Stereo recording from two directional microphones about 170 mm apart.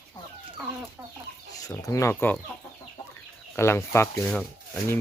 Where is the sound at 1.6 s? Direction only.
20° left (ahead or behind).